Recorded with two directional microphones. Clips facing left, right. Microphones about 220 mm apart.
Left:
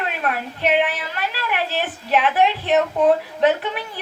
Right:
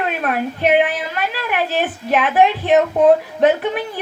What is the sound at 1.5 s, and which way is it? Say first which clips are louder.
A woman's voice: right 7 dB; 50° right (ahead or behind).